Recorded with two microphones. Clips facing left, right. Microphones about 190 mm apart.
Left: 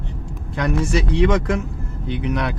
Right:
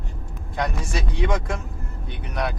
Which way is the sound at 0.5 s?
70° left (ahead or behind).